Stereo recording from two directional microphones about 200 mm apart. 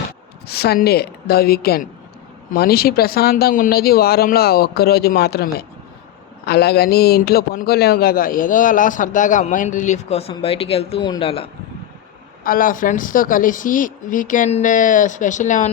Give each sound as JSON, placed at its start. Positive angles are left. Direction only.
{"t": 0.4, "sound": "a man's voice", "side_deg": 55}
{"t": 12.4, "sound": "a man's voice", "side_deg": 45}